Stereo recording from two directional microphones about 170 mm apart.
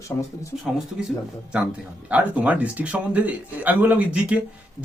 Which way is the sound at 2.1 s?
10° right (ahead or behind).